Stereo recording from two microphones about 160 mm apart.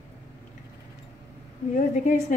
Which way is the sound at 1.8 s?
55° left (ahead or behind).